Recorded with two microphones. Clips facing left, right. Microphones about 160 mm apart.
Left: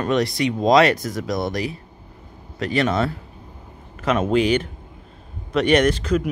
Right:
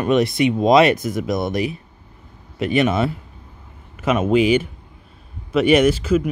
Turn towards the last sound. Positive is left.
turn(degrees=-5)  # may be behind; listen again after turning